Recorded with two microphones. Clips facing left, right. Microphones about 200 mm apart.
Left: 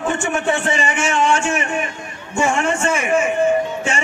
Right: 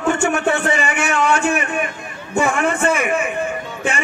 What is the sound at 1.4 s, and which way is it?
A man's voice, 60° right (ahead or behind).